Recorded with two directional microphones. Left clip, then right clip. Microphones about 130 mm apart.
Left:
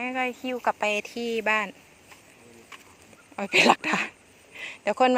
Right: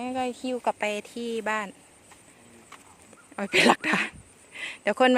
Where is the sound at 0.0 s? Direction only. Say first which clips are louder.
Left 2 dB; 45° right (ahead or behind).